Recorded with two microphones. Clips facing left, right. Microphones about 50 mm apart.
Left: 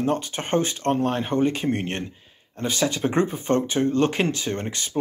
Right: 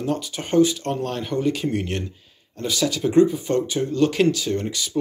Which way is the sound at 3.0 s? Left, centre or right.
Left.